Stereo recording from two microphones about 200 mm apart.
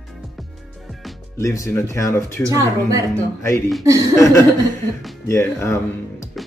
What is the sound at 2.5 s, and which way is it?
Speech, 15° right (ahead or behind).